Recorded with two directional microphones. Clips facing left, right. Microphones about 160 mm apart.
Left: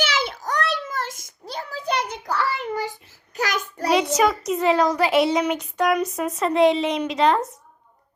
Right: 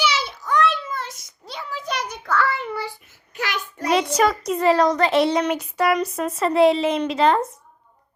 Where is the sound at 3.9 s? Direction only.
Centre (ahead or behind).